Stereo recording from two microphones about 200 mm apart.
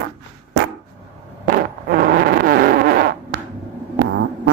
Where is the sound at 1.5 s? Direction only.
45° right (ahead or behind).